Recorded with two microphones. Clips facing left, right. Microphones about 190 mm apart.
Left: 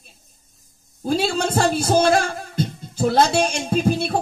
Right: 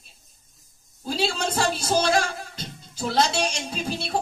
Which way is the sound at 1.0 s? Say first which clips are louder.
Left 5 dB; 55° left (ahead or behind).